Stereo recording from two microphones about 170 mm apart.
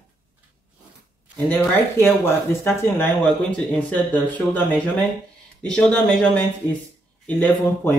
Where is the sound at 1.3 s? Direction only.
10° left (ahead or behind).